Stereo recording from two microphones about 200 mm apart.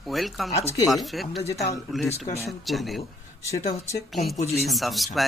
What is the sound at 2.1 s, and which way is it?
Speech, 30° left (ahead or behind).